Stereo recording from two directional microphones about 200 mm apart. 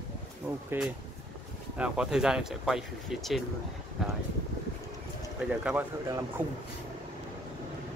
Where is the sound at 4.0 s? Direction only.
Centre (ahead or behind).